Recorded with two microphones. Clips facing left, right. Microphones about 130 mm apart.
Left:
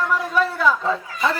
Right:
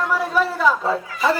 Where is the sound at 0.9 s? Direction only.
5° right (ahead or behind).